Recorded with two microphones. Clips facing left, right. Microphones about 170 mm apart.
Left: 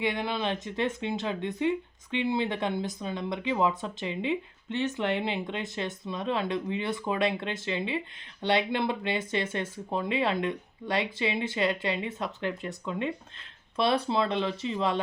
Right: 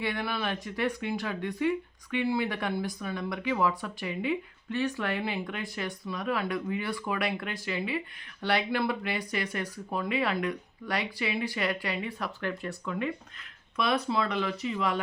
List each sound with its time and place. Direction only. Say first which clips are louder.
0.0 s speech: left 2 dB; 20° left (ahead or behind)